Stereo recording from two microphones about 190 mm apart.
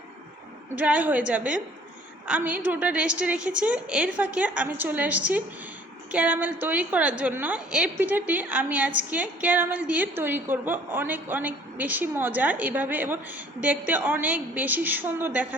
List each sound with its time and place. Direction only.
0.8 s a woman's voice: 10° right (ahead or behind)